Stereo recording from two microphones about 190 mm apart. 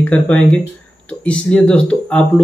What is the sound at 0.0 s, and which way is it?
Speech, 10° left (ahead or behind).